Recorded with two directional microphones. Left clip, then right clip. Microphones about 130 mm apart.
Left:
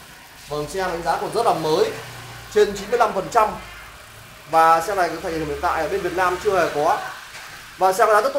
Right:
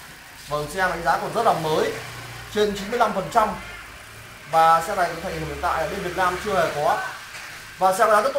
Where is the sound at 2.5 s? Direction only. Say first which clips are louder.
Left 5 dB; centre (ahead or behind).